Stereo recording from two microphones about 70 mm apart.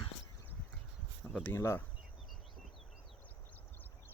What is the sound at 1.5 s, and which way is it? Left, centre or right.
Speech, left.